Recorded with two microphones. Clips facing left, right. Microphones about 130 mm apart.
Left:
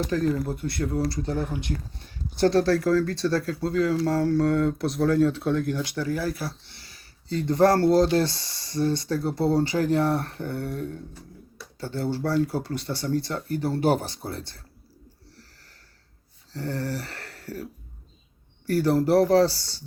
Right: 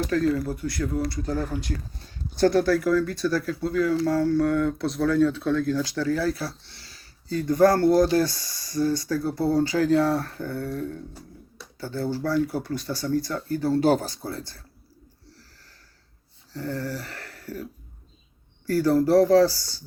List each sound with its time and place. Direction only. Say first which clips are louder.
0.1 s speech: right 1 dB; 20° left (ahead or behind)
1.3 s speech: even; 20° left (ahead or behind)
16.5 s a sound: even; 30° left (ahead or behind)
18.6 s speech: right 1 dB; 25° left (ahead or behind)